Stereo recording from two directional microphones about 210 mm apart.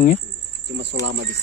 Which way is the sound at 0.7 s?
60° right (ahead or behind).